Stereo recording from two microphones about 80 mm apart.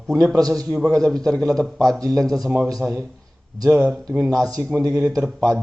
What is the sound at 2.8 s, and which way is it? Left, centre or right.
A man's voice, right.